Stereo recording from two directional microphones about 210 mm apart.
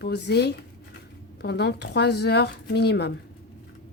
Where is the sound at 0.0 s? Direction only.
55° left (ahead or behind).